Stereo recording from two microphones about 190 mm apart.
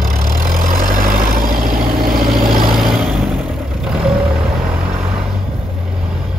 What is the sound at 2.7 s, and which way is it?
Vehicle, centre (ahead or behind).